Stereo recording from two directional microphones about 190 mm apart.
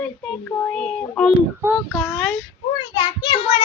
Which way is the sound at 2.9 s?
25° left (ahead or behind).